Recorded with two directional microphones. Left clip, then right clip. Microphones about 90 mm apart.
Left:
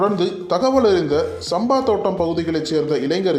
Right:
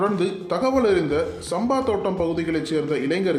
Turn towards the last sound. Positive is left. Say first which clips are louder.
# left 4 dB
turn(degrees=30)  # may be behind; listen again after turning